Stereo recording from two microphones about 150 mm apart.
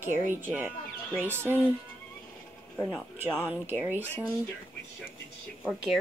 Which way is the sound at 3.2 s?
15° right (ahead or behind).